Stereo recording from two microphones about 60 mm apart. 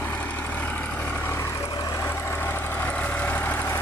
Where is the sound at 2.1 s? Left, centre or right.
Left.